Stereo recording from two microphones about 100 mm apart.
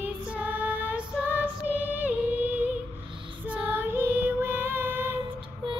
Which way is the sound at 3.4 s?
15° right (ahead or behind).